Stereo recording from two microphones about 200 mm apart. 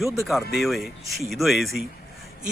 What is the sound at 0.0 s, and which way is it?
Speech, centre (ahead or behind).